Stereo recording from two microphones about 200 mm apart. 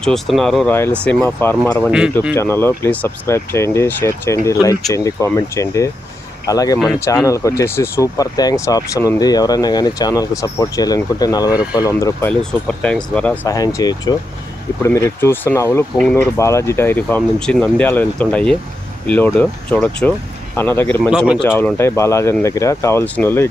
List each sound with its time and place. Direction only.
0.0 s speech: centre (ahead or behind)
0.7 s speech: 10° left (ahead or behind)
1.9 s speech: 5° right (ahead or behind)
2.3 s speech: 15° left (ahead or behind)
12.3 s speech: 5° left (ahead or behind)
13.4 s speech: 15° left (ahead or behind)